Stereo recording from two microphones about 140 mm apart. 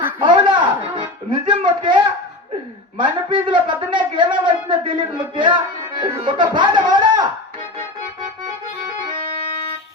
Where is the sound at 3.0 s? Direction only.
35° right (ahead or behind).